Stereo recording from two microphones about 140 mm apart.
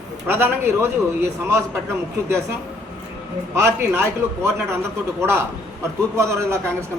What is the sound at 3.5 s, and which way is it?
A man's voice, 20° right (ahead or behind).